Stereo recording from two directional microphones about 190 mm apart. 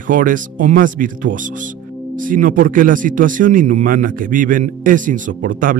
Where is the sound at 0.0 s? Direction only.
45° right (ahead or behind).